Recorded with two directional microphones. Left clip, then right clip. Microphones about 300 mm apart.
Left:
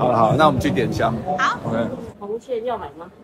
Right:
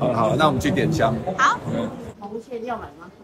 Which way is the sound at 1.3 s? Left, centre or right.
Centre.